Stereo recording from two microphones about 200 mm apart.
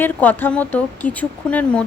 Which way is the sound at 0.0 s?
10° left (ahead or behind).